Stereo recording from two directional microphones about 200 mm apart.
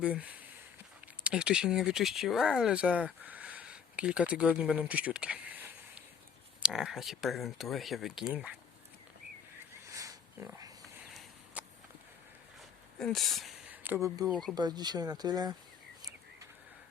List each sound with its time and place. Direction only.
0.0 s speech: 5° right (ahead or behind)
9.8 s a sound: 15° right (ahead or behind)
10.8 s a sound: centre (ahead or behind)
13.0 s speech: centre (ahead or behind)
14.3 s speech: centre (ahead or behind)
14.5 s speech: 20° right (ahead or behind)